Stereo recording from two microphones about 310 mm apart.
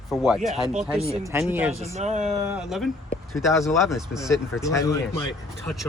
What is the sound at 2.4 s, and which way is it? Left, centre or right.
Speech, centre.